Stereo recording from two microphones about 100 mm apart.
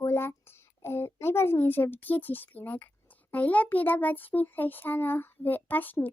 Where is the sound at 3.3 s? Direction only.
15° left (ahead or behind).